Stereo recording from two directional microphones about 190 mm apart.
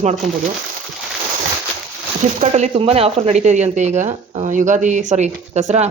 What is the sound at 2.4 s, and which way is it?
Speech, 35° right (ahead or behind).